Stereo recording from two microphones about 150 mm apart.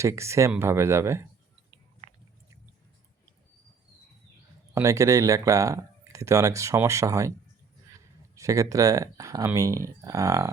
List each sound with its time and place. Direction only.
0.0 s speech: 20° right (ahead or behind)
2.0 s biting: 50° right (ahead or behind)
4.7 s speech: 20° right (ahead or behind)
8.4 s speech: 20° right (ahead or behind)